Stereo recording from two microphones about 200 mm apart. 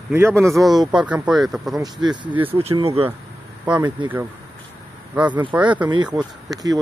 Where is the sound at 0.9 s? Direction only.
5° right (ahead or behind).